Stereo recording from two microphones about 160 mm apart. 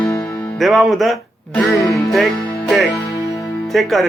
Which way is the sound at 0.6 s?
Centre (ahead or behind).